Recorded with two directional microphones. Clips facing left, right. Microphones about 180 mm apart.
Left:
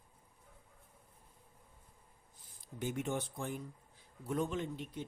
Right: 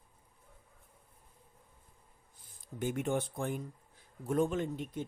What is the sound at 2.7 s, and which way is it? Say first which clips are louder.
Speech: right 4 dB; 55° right (ahead or behind).